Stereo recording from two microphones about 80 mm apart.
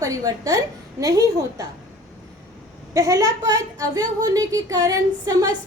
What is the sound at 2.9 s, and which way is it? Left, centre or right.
A woman's voice, right.